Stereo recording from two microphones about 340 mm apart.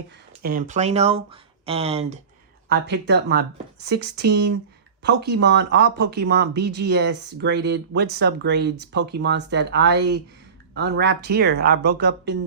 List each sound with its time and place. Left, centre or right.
0.4 s speech: right
2.6 s speech: right